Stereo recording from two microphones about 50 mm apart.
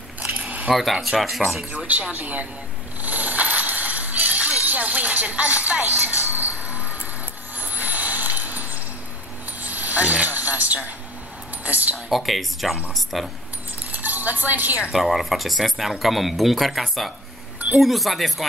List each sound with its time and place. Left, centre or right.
0.3 s keys jangling: right
0.7 s speech: centre
1.9 s speech: right
3.0 s music: right
7.5 s a sound: right
11.6 s speech: right
12.1 s speech: centre
13.9 s cutlery: right
14.8 s speech: centre